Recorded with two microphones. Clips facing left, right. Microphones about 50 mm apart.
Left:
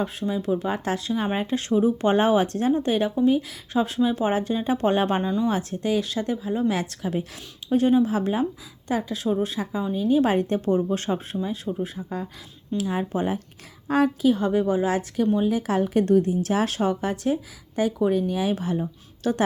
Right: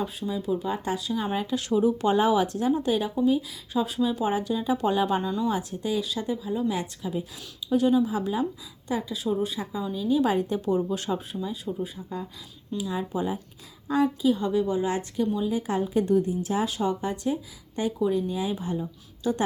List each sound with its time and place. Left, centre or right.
0.0 s speech: left
5.2 s speech: left
5.5 s a woman's voice: left
6.3 s speech: left
6.7 s a woman's voice: left
7.7 s speech: left
8.9 s a woman's voice: left
10.9 s speech: left
11.6 s a woman's voice: left
14.7 s a woman's voice: left